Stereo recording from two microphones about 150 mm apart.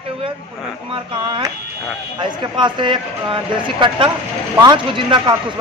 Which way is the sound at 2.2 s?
30° right (ahead or behind).